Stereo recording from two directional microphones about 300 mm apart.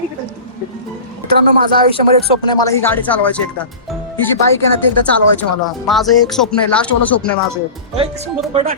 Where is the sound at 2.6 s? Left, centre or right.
Centre.